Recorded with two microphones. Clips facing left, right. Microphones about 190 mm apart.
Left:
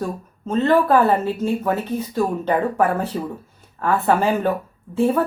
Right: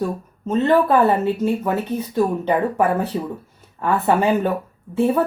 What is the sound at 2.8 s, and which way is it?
Speech, 60° right (ahead or behind).